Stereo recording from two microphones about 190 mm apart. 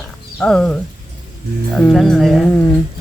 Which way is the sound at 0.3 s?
5° left (ahead or behind).